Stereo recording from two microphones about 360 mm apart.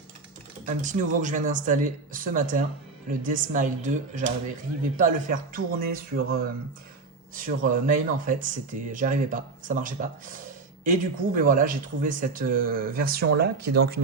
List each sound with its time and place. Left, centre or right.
0.6 s speech: right